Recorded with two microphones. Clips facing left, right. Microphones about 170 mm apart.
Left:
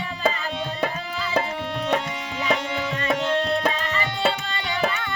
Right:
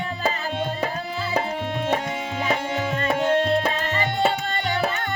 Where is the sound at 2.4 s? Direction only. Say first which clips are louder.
Left 1 dB; 45° right (ahead or behind).